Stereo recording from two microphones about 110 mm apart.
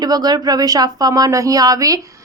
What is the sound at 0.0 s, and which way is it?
A woman's voice, 35° right (ahead or behind).